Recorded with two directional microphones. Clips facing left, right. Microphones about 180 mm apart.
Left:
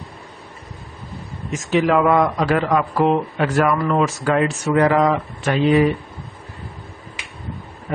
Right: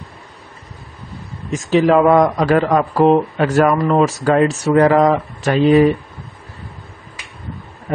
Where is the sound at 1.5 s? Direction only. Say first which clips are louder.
Right 4 dB; 35° right (ahead or behind).